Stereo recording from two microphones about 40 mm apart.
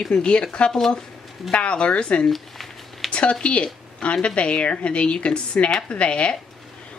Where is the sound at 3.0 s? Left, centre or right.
Left.